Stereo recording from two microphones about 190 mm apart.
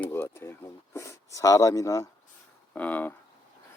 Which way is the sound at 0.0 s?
10° left (ahead or behind).